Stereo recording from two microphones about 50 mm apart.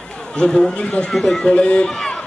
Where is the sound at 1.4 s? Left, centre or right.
Left.